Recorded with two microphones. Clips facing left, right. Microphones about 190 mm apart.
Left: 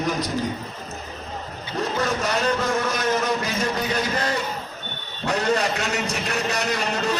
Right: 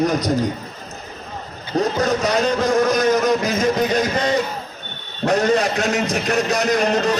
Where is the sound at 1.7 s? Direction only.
40° right (ahead or behind).